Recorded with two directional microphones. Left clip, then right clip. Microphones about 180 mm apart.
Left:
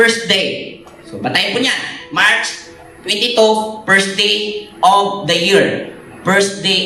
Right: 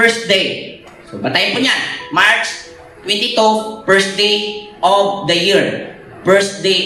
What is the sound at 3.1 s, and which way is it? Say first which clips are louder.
Speech: left 1 dB; 35° left (ahead or behind).